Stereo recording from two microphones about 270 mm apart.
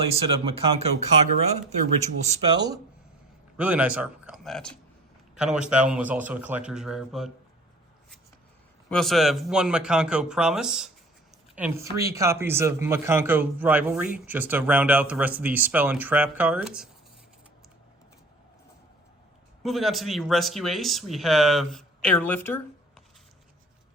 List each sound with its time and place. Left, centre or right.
0.3 s speech: right
2.0 s speech: right
3.6 s speech: centre
8.9 s speech: centre
19.6 s speech: centre